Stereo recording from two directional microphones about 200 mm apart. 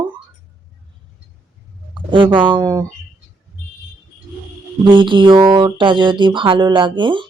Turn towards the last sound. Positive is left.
turn(degrees=-25)  # may be behind; listen again after turning